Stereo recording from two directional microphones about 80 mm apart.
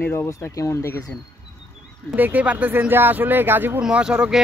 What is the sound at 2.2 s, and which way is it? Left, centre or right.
Speech, right.